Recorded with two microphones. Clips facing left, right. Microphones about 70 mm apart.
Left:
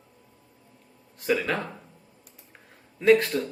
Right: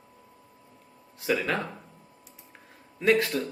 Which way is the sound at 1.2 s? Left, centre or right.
Centre.